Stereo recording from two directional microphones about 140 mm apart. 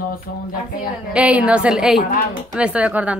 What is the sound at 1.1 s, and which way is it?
A woman's voice, 10° right (ahead or behind).